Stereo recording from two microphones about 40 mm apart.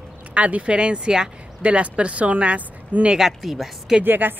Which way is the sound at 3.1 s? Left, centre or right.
Centre.